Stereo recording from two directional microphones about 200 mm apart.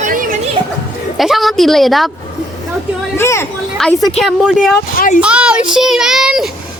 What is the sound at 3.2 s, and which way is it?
Speech, 15° left (ahead or behind).